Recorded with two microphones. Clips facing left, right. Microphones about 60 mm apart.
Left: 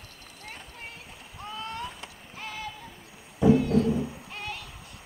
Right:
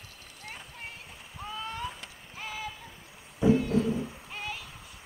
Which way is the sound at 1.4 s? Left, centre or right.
Centre.